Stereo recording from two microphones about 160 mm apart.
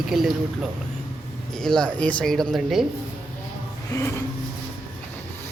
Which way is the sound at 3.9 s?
20° left (ahead or behind).